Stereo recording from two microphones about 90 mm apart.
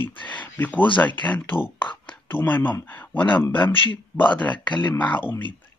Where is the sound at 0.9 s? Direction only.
20° left (ahead or behind).